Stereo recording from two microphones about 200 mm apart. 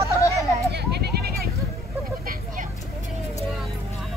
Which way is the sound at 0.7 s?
55° right (ahead or behind).